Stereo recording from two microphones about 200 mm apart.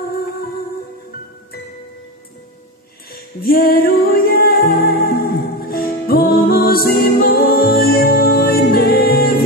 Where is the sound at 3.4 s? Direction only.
50° left (ahead or behind).